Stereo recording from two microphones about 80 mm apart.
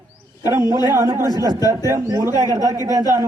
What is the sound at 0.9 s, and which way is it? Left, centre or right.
A man's voice, right.